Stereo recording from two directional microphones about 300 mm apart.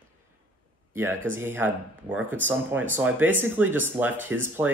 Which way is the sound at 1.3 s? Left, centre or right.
Centre.